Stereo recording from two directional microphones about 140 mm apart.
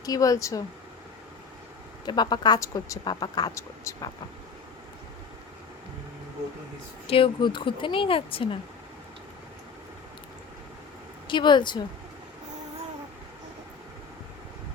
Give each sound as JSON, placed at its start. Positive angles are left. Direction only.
{"t": 0.0, "sound": "speech", "side_deg": 25}
{"t": 2.0, "sound": "speech", "side_deg": 30}
{"t": 7.1, "sound": "speech", "side_deg": 35}
{"t": 11.3, "sound": "speech", "side_deg": 35}